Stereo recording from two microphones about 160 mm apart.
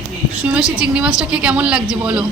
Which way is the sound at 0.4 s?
5° right (ahead or behind).